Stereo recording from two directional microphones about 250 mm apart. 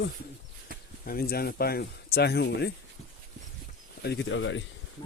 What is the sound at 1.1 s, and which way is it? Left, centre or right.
Speech, left.